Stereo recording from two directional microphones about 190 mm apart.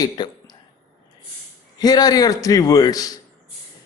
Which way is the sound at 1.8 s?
20° left (ahead or behind).